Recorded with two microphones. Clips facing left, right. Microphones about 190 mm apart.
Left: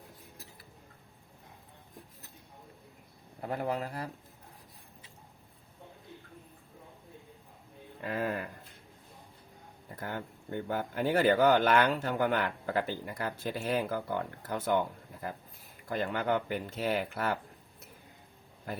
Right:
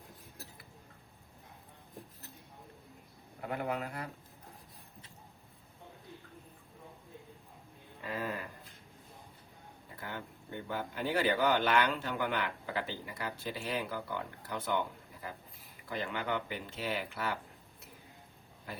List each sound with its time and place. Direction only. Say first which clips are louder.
3.4 s speech: left 3 dB; 35° left (ahead or behind)
8.0 s a sound: left 5 dB; 55° left (ahead or behind)
9.9 s speech: left 5 dB; 45° left (ahead or behind)